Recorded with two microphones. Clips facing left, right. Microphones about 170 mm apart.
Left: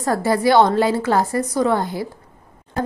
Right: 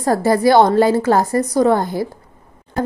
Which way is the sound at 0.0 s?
40° right (ahead or behind).